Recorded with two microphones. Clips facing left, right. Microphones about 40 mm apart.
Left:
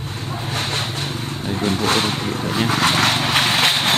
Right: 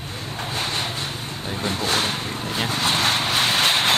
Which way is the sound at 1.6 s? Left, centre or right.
Left.